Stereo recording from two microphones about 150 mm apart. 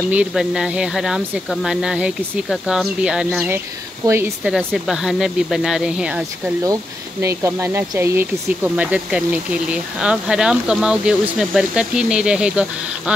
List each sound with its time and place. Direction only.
0.1 s speech: 5° right (ahead or behind)
3.4 s speech: 15° right (ahead or behind)
4.6 s speech: centre (ahead or behind)
6.6 s speech: 20° right (ahead or behind); by 13.1 s 5° right (ahead or behind)